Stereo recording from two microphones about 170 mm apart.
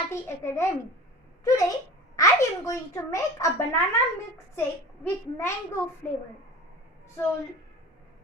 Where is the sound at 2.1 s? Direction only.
20° left (ahead or behind).